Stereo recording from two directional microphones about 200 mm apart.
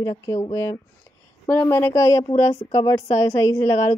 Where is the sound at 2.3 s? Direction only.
30° left (ahead or behind).